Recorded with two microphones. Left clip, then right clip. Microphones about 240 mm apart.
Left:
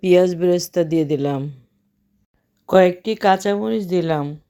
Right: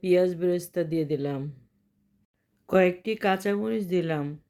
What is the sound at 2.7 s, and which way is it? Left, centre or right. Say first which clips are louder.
A woman's voice: left 8 dB; left.